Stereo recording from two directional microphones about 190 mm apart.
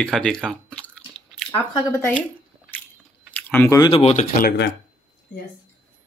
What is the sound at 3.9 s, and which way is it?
Speech, 35° left (ahead or behind).